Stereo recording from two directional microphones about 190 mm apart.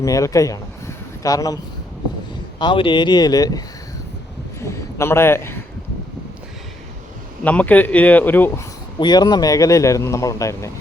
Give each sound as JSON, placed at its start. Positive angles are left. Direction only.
{"t": 0.0, "sound": "speech", "side_deg": 15}
{"t": 2.6, "sound": "speech", "side_deg": 25}
{"t": 4.6, "sound": "a man's voice", "side_deg": 15}
{"t": 7.4, "sound": "speech", "side_deg": 10}
{"t": 9.0, "sound": "speech", "side_deg": 20}